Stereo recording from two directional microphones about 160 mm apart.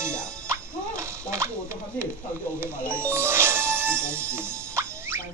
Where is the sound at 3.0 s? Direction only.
15° right (ahead or behind).